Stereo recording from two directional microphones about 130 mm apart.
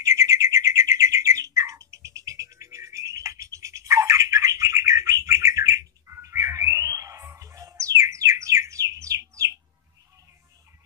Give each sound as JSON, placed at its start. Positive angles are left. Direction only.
{"t": 0.0, "sound": "bird", "side_deg": -25}